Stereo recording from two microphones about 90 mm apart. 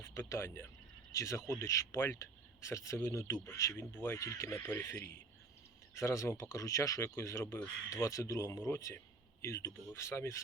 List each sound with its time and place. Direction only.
0.0 s speech: 30° left (ahead or behind)
3.8 s speech: 25° left (ahead or behind)